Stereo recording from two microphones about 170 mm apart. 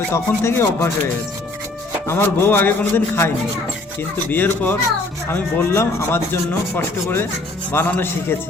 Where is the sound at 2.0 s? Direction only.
15° left (ahead or behind).